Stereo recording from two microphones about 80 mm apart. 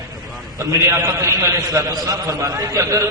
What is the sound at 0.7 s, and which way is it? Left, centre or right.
A man's voice, right.